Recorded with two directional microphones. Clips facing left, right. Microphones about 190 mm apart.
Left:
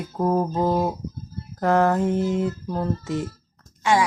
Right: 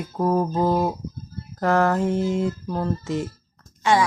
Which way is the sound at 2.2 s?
15° right (ahead or behind).